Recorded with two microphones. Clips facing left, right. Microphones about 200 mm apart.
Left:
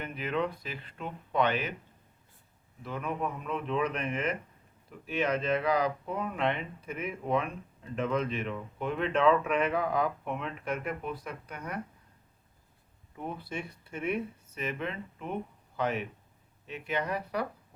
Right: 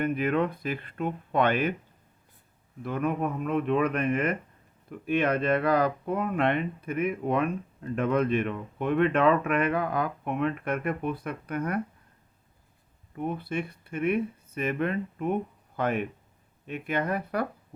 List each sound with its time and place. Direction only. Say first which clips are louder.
0.0 s speech: right 7 dB; 55° right (ahead or behind)
2.8 s speech: right 6 dB; 55° right (ahead or behind)
13.1 s speech: right 7 dB; 60° right (ahead or behind)